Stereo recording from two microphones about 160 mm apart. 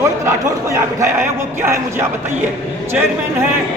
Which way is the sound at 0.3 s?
20° right (ahead or behind).